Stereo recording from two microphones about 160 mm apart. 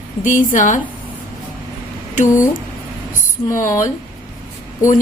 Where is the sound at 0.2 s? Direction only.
55° left (ahead or behind).